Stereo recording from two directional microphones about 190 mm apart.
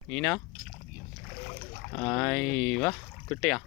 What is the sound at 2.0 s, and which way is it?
Speech, 5° left (ahead or behind).